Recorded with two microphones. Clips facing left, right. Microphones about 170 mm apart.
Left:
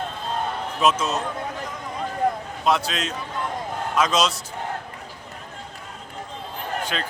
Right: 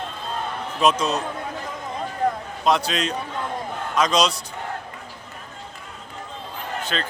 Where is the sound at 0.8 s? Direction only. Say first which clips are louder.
Right 2 dB; 5° left (ahead or behind).